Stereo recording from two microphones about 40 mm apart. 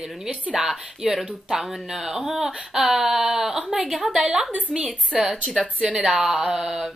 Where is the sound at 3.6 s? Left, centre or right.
Centre.